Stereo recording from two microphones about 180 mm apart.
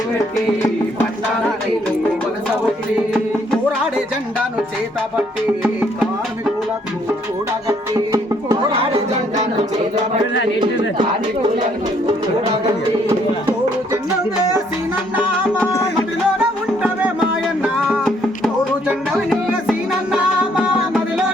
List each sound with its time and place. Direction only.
3.5 s music: 5° right (ahead or behind)
5.6 s music: 10° right (ahead or behind)
7.7 s music: 20° right (ahead or behind)
16.0 s music: 5° right (ahead or behind)